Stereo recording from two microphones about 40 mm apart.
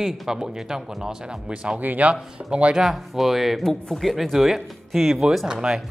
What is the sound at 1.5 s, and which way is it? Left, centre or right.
Speech, right.